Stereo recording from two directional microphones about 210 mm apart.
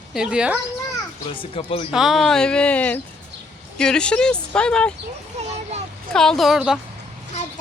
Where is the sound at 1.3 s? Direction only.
25° left (ahead or behind).